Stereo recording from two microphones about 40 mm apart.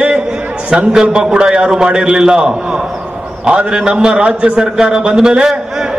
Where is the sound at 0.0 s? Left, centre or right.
Right.